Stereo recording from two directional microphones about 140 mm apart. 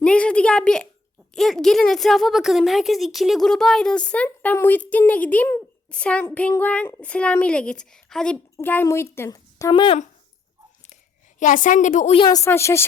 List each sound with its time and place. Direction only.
0.0 s speech: 10° left (ahead or behind)
8.5 s a woman's voice: 15° left (ahead or behind)
9.7 s speech: 35° left (ahead or behind)
11.3 s a woman's voice: 65° left (ahead or behind)
12.1 s a woman's voice: 30° left (ahead or behind)
12.5 s speech: 20° left (ahead or behind)